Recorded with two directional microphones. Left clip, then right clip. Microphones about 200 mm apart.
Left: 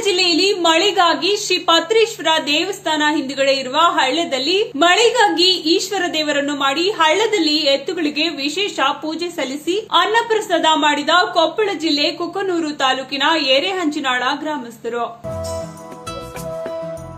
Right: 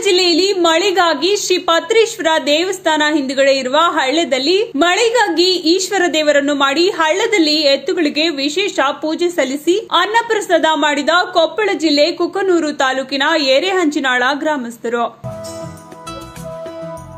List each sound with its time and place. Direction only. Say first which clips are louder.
0.0 s a woman's voice: right 3 dB; 35° right (ahead or behind)